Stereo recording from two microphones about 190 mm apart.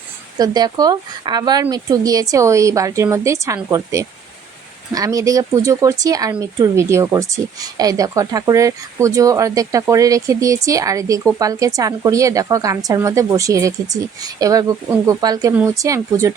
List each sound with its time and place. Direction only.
0.3 s speech: 20° right (ahead or behind)